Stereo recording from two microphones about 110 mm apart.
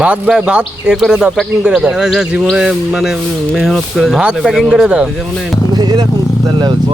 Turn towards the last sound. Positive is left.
turn(degrees=-40)  # may be behind; listen again after turning